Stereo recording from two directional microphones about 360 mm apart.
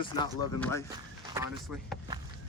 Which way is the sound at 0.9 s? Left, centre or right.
Centre.